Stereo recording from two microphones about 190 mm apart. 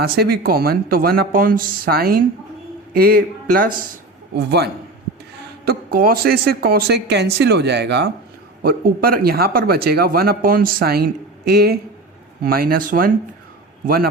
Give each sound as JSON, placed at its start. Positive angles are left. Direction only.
{"t": 0.0, "sound": "speech", "side_deg": -55}
{"t": 8.6, "sound": "speech", "side_deg": -50}